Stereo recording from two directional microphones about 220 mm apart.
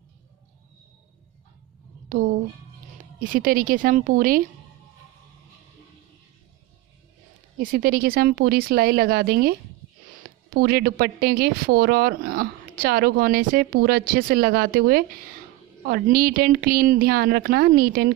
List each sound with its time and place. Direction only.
2.0 s a woman's voice: 35° right (ahead or behind)
7.5 s speech: 40° right (ahead or behind)